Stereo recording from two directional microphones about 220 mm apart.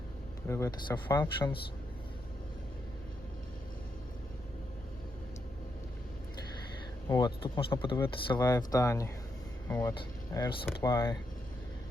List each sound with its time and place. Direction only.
0.4 s speech: 10° left (ahead or behind)
7.1 s speech: 20° left (ahead or behind)